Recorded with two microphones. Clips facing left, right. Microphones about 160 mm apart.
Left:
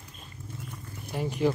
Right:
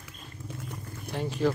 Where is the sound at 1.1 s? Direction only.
10° left (ahead or behind).